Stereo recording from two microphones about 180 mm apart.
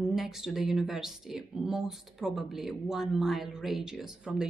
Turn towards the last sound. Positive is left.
turn(degrees=-5)  # may be behind; listen again after turning